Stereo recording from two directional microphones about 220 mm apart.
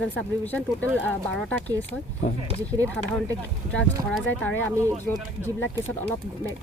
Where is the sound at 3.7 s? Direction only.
5° left (ahead or behind).